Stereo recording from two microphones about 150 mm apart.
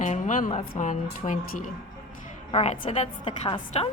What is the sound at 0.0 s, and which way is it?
A woman's voice, 60° left (ahead or behind).